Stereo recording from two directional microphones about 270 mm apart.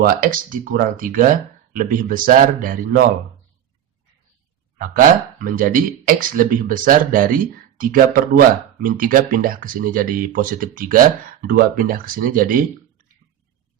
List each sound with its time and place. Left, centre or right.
0.0 s speech: right
4.8 s speech: right